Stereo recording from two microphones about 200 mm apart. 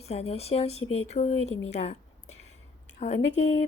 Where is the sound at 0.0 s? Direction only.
30° left (ahead or behind).